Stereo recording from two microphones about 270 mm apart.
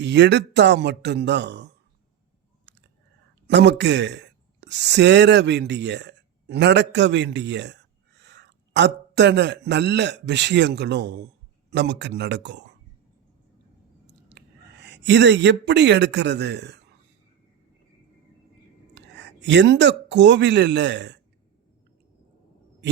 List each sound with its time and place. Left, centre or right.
0.0 s speech: right
3.4 s a man's voice: right
14.3 s speech: right
18.9 s speech: right